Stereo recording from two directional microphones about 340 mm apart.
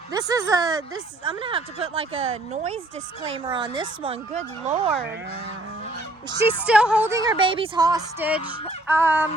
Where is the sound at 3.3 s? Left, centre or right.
Centre.